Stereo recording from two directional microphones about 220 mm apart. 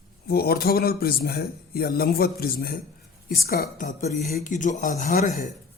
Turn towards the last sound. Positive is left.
turn(degrees=35)  # may be behind; listen again after turning